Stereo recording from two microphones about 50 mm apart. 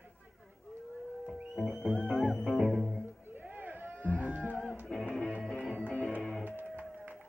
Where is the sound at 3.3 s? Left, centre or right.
Right.